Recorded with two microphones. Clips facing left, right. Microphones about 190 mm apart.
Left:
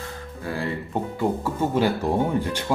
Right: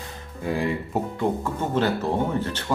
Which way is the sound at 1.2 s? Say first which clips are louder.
Left 4 dB; 10° left (ahead or behind).